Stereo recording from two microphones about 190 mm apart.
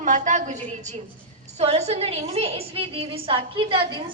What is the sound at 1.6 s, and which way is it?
A woman's voice, 35° right (ahead or behind).